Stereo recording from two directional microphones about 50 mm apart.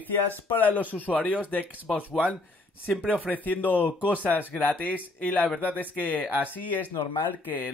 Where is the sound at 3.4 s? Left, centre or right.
Left.